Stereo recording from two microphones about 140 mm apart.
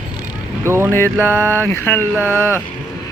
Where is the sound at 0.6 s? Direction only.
20° right (ahead or behind).